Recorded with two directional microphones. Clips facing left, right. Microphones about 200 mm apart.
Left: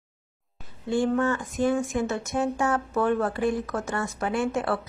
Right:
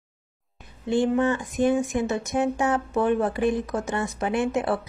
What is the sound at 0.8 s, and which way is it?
Speech, 20° right (ahead or behind).